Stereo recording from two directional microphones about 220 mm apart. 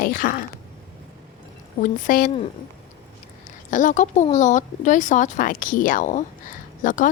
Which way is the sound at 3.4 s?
35° left (ahead or behind).